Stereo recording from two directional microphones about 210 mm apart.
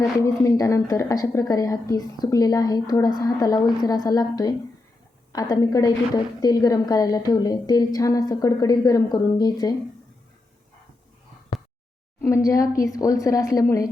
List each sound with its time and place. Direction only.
0.0 s a woman's voice: 15° left (ahead or behind)
12.2 s a woman's voice: 15° left (ahead or behind)